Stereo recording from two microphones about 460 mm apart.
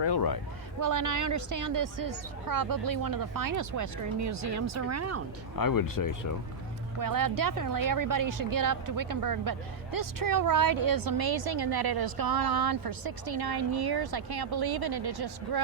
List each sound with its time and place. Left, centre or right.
0.0 s speech: left
0.8 s a woman's voice: right
5.5 s speech: left
7.0 s speech: right